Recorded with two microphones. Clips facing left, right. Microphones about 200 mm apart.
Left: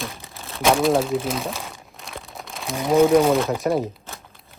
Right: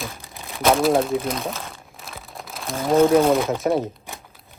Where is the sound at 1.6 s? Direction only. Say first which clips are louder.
Even; centre (ahead or behind).